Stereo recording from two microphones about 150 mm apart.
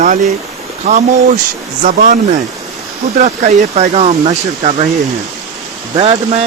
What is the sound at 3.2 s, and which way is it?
Speech, 50° right (ahead or behind).